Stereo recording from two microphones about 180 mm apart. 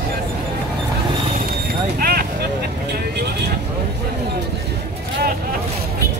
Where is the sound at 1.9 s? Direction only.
55° right (ahead or behind).